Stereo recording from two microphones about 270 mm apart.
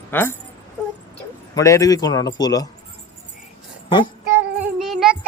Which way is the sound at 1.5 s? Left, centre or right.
Centre.